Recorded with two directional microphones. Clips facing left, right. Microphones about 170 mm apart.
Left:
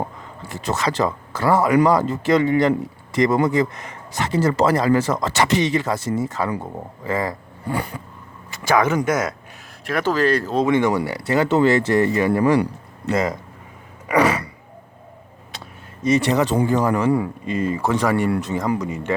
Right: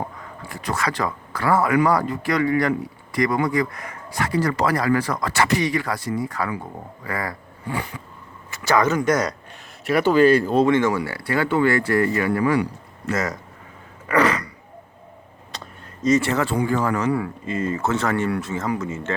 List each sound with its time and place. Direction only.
0.4 s speech: 25° left (ahead or behind)
8.6 s speech: 10° left (ahead or behind)
9.8 s speech: 5° right (ahead or behind)
10.7 s speech: 15° left (ahead or behind)
14.1 s a sound: 10° left (ahead or behind)
16.0 s speech: 15° left (ahead or behind)